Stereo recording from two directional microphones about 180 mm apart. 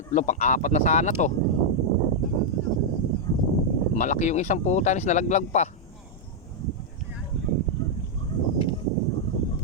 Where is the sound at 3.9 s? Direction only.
40° left (ahead or behind).